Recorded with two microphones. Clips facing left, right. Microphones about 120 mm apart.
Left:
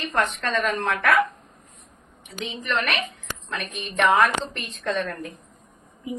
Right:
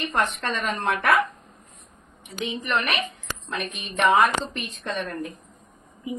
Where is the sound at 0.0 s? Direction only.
15° right (ahead or behind).